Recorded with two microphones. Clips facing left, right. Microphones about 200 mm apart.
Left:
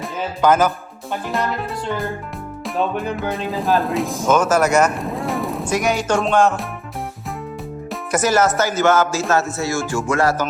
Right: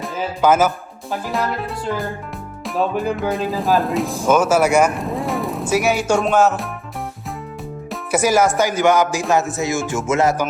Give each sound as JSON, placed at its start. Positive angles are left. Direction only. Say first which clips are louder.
{"t": 0.0, "sound": "speech", "louder": "even", "side_deg": -5}
{"t": 7.9, "sound": "speech", "louder": "right 1 dB", "side_deg": -10}
{"t": 9.3, "sound": "music", "louder": "right 2 dB", "side_deg": -15}